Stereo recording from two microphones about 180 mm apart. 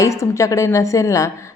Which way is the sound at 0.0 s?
15° left (ahead or behind).